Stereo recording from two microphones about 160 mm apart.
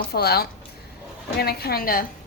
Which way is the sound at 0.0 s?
75° left (ahead or behind).